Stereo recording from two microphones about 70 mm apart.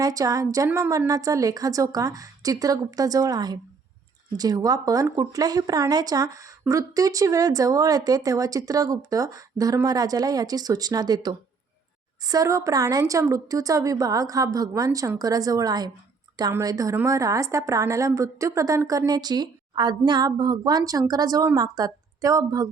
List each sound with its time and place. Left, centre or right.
0.0 s speech: right
5.0 s speech: right
12.2 s a woman's voice: right
16.6 s a woman's voice: right
19.1 s a woman's voice: right